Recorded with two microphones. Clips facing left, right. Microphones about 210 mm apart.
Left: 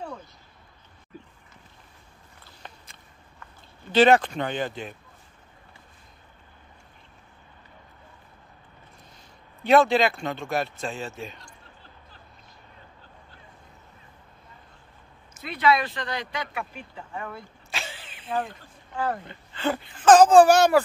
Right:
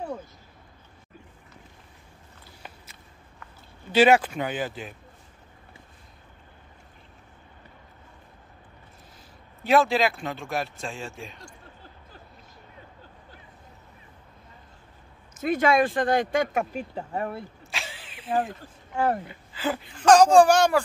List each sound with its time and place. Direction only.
2.4 s a sound: 5° right (ahead or behind)
3.9 s speech: 10° right (ahead or behind)
9.6 s speech: centre (ahead or behind)
15.4 s speech: 45° right (ahead or behind)
17.6 s vehicle: centre (ahead or behind)
19.2 s speech: 5° right (ahead or behind)